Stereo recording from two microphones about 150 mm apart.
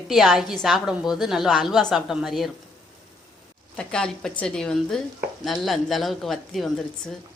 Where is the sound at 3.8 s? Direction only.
5° left (ahead or behind).